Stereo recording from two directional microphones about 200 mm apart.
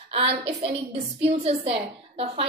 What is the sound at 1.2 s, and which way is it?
Speech, 30° right (ahead or behind).